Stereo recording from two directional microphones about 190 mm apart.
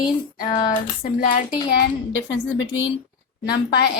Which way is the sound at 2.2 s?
80° left.